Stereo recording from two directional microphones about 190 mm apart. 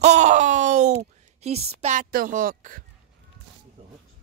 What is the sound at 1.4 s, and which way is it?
A woman's voice, 35° right (ahead or behind).